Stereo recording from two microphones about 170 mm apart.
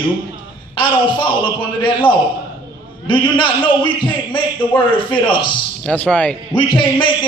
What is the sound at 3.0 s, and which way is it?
A man's voice, 30° left (ahead or behind).